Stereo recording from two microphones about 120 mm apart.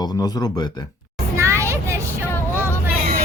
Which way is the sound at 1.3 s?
25° right (ahead or behind).